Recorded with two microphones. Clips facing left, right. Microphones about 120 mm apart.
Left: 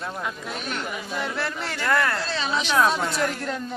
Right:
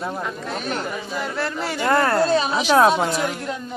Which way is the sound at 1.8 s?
30° right (ahead or behind).